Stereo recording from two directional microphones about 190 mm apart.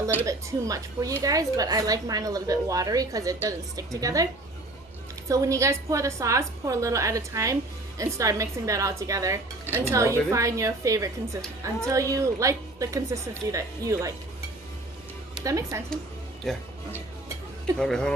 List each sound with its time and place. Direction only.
0.0 s speech: 15° right (ahead or behind)
5.3 s speech: 15° right (ahead or behind)
15.4 s speech: 15° right (ahead or behind)
16.4 s speech: centre (ahead or behind)
17.7 s speech: 5° left (ahead or behind)